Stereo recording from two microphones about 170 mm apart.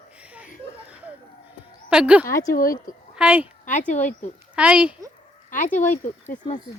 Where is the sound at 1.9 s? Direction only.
5° right (ahead or behind).